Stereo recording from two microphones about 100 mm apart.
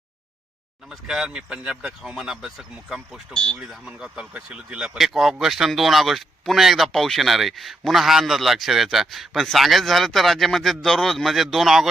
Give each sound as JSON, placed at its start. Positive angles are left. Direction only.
{"t": 0.9, "sound": "speech", "side_deg": -5}
{"t": 3.3, "sound": "speech", "side_deg": 10}
{"t": 3.6, "sound": "speech", "side_deg": -5}